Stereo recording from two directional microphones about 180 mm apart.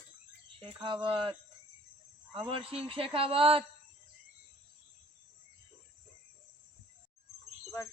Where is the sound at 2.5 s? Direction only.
30° right (ahead or behind).